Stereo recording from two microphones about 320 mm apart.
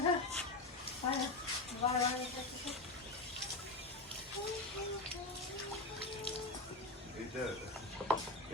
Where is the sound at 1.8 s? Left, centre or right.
Centre.